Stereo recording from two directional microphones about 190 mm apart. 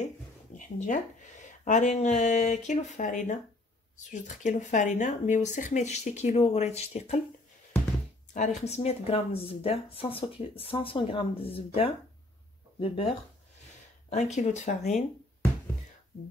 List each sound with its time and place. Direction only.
0.6 s speech: 40° left (ahead or behind)
8.3 s speech: 40° left (ahead or behind)
14.1 s speech: 40° left (ahead or behind)